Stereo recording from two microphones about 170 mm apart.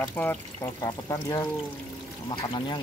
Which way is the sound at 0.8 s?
20° left (ahead or behind).